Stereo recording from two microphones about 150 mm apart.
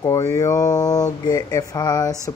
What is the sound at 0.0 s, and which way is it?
Speech, 20° left (ahead or behind).